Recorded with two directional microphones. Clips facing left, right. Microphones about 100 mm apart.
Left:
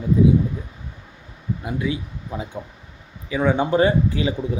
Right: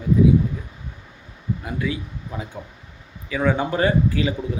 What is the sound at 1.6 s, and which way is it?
Speech, 20° left (ahead or behind).